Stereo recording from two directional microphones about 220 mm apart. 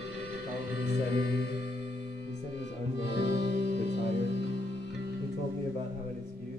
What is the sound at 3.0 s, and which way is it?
Music, 50° left (ahead or behind).